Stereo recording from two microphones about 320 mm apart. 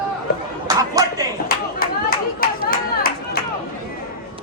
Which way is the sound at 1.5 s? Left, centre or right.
Left.